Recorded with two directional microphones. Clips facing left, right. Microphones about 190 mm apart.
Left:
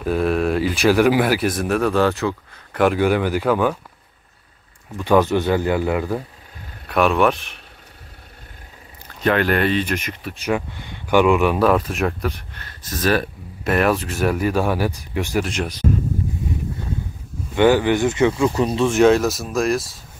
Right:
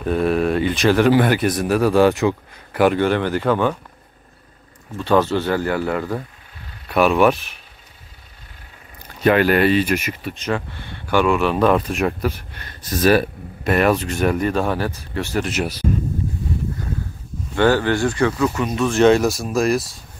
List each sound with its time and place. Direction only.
0.0 s speech: centre (ahead or behind); by 2.8 s 15° right (ahead or behind)
2.8 s speech: 5° left (ahead or behind)
4.9 s speech: 15° left (ahead or behind)
6.9 s speech: centre (ahead or behind)
9.2 s speech: 5° right (ahead or behind)
10.3 s speech: 10° left (ahead or behind)
15.4 s speech: 5° right (ahead or behind)
17.6 s speech: 15° left (ahead or behind)
18.9 s speech: centre (ahead or behind)